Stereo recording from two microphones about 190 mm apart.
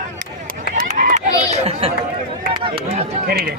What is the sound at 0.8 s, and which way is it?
Honk, 40° right (ahead or behind).